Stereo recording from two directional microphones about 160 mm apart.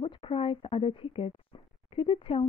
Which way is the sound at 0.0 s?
35° left (ahead or behind).